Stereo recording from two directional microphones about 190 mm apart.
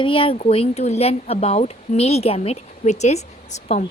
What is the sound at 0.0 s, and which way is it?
Speech, 30° left (ahead or behind).